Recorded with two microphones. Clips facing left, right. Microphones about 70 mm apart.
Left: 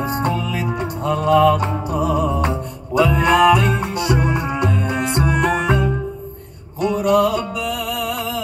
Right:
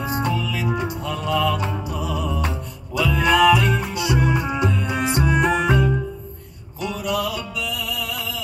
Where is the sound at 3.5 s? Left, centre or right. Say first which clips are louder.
Left 2 dB; left.